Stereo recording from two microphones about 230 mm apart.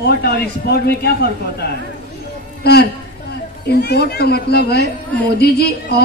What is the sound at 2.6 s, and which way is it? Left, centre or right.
A man's voice, left.